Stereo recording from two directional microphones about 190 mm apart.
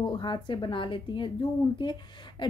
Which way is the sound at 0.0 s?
25° left (ahead or behind).